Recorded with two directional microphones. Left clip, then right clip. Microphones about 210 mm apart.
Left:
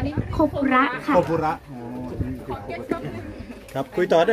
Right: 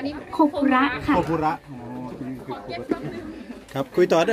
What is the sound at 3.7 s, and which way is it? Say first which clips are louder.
Speech: right 1 dB; 40° right (ahead or behind).